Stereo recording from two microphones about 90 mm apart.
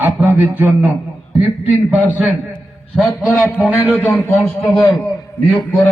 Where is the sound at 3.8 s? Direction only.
25° left (ahead or behind).